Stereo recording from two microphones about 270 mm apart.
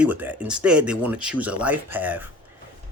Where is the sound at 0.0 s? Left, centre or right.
Centre.